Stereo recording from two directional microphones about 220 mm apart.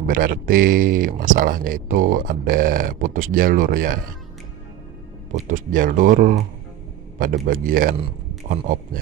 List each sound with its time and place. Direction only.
0.0 s speech: 40° right (ahead or behind)
5.5 s speech: 40° right (ahead or behind)